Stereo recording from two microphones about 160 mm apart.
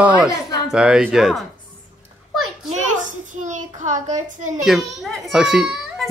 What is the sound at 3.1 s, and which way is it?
A child's voice, 50° right (ahead or behind).